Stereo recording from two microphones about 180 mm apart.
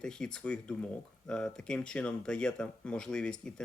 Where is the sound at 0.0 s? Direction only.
5° left (ahead or behind).